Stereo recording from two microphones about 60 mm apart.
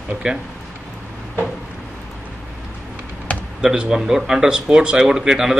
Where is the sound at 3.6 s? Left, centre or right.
Centre.